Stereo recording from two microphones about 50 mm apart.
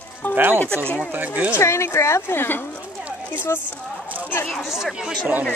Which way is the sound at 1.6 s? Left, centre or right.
Left.